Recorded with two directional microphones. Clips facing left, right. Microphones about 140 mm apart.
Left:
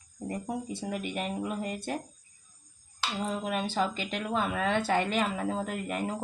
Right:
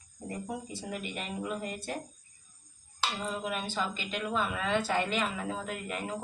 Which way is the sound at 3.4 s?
60° left (ahead or behind).